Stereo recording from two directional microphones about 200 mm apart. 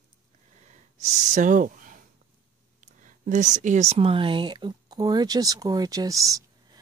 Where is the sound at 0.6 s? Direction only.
35° right (ahead or behind).